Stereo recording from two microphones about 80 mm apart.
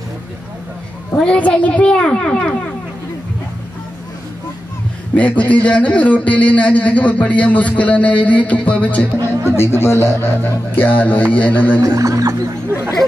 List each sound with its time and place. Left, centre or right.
1.1 s a man's voice: centre
5.1 s a man's voice: centre
9.6 s a man's voice: left
11.8 s speech: right